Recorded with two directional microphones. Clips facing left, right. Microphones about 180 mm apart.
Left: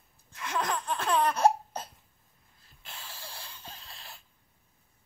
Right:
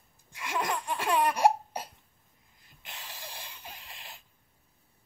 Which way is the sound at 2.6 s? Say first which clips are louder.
Even; 15° right (ahead or behind).